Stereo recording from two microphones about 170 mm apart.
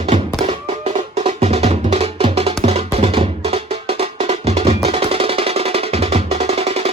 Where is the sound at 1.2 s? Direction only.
35° right (ahead or behind).